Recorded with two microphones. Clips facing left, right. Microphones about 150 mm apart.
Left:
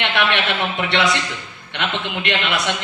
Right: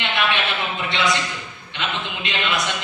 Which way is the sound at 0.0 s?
75° left (ahead or behind).